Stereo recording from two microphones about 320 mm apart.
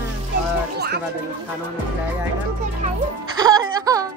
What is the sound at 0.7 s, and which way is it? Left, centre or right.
Music, right.